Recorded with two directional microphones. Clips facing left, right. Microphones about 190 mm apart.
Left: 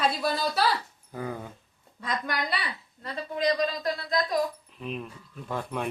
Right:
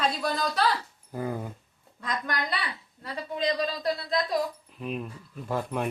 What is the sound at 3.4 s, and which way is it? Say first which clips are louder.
Speech: left 2 dB; 30° right (ahead or behind).